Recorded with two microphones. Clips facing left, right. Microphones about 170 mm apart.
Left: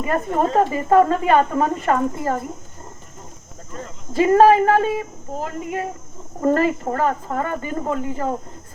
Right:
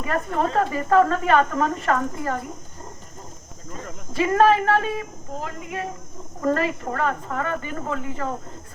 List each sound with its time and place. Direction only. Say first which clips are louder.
0.0 s a woman's voice: left 4 dB; 20° left (ahead or behind)
0.3 s speech: left 4 dB; 40° left (ahead or behind)
0.6 s a woman's voice: left 2 dB; 20° left (ahead or behind)
4.1 s a woman's voice: left 5 dB; 30° left (ahead or behind)